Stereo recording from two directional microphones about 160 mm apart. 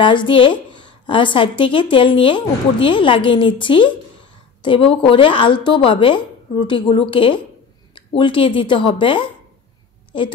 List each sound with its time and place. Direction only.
0.0 s a woman's voice: 30° left (ahead or behind)